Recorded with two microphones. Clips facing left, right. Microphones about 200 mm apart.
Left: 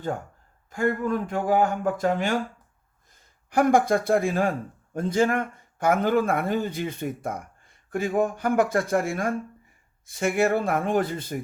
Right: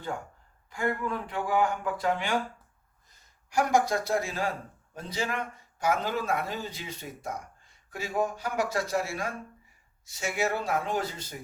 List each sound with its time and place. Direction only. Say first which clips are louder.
0.7 s speech: left 6 dB; 45° left (ahead or behind)